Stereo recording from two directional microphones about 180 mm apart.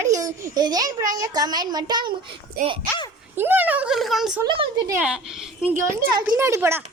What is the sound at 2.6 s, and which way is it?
Speech, 55° right (ahead or behind).